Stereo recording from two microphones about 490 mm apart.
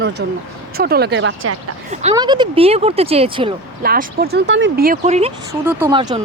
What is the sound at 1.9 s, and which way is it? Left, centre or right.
Speech, centre.